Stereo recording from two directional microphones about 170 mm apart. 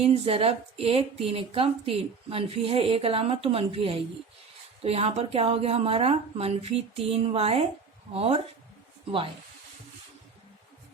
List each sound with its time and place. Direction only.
0.0 s speech: 35° right (ahead or behind)